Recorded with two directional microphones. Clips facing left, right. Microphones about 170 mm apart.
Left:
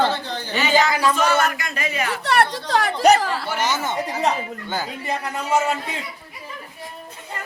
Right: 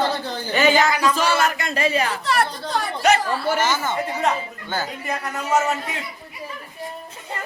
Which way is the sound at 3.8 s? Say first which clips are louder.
Even; 20° left (ahead or behind).